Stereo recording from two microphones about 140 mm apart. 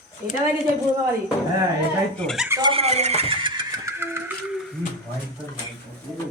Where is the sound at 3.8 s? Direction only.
15° right (ahead or behind).